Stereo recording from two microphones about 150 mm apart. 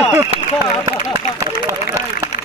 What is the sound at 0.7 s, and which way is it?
Speech, 50° left (ahead or behind).